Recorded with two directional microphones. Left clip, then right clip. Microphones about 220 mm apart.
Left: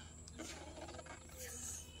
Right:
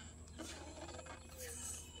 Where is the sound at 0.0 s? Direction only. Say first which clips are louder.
Even; 5° right (ahead or behind).